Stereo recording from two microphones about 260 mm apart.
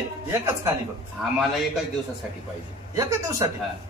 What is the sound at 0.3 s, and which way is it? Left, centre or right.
A man's voice, centre.